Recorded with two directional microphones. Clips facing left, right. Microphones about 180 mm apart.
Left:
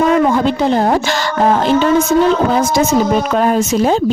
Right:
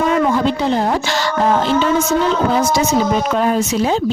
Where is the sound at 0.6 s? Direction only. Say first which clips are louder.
Left 4 dB; 45° left (ahead or behind).